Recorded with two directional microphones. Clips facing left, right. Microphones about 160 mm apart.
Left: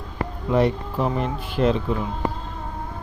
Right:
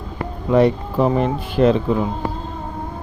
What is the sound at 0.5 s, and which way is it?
Speech, 90° right.